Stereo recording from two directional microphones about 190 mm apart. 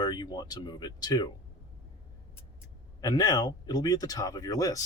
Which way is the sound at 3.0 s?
20° left (ahead or behind).